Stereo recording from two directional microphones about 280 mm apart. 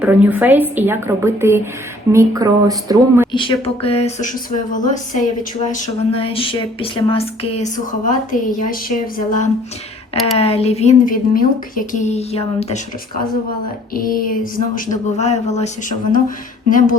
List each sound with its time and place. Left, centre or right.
0.0 s a woman's voice: centre
3.3 s speech: centre
13.9 s speech: left